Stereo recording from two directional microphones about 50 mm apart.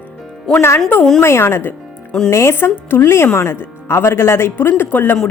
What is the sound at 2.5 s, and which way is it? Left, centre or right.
Speech, left.